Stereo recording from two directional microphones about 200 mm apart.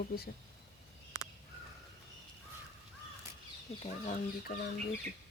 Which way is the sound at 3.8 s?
35° left (ahead or behind).